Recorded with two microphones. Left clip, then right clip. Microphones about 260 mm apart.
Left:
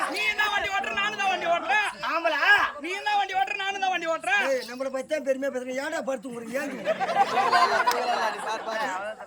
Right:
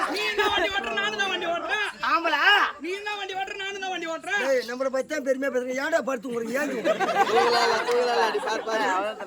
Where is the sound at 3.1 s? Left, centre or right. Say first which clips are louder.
Left 6 dB; centre.